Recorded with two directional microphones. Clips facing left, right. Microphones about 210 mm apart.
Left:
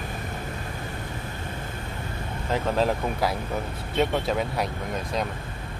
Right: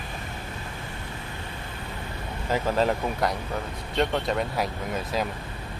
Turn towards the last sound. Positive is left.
turn(degrees=-5)  # may be behind; listen again after turning